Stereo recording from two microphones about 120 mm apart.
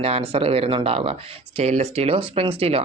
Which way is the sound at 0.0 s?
55° right (ahead or behind).